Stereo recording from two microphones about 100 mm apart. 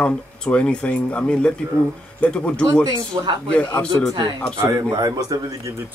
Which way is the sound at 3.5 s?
10° left (ahead or behind).